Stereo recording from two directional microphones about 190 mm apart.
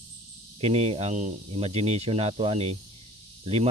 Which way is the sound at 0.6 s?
30° right (ahead or behind).